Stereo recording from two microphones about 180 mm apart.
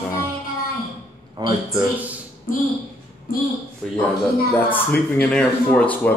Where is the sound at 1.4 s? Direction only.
25° right (ahead or behind).